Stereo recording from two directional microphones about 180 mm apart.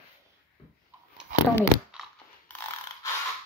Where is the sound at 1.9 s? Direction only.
5° right (ahead or behind).